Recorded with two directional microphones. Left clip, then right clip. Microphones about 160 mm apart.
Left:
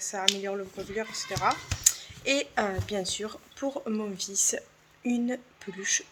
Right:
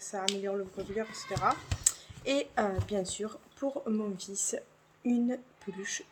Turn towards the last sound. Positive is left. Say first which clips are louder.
# left 8 dB
turn(degrees=-5)  # may be behind; listen again after turning